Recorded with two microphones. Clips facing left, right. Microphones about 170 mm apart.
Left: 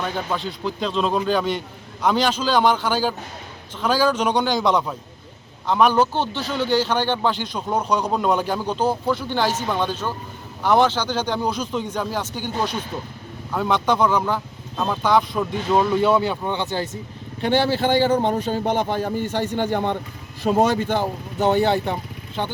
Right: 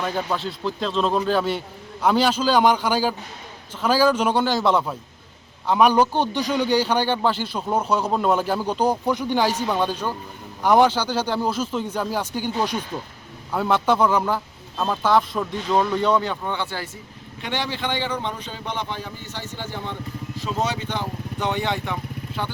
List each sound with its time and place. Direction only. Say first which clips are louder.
0.0 s a man's voice: even; centre (ahead or behind); by 16.9 s 20° left (ahead or behind)
17.4 s a man's voice: left 8 dB; 35° left (ahead or behind)